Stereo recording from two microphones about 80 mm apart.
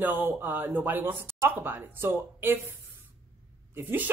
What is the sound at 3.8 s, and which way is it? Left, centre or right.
Speech, right.